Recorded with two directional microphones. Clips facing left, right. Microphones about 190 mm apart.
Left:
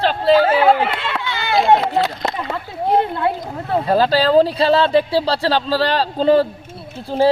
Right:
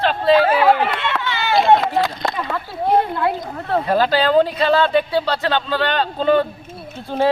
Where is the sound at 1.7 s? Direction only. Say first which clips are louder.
Left 1 dB; 20° left (ahead or behind).